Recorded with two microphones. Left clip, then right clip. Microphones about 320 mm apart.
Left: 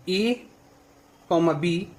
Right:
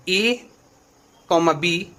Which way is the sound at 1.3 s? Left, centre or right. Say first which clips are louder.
Right 4 dB; right.